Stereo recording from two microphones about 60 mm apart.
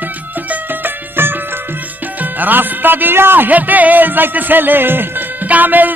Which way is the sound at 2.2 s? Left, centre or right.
Right.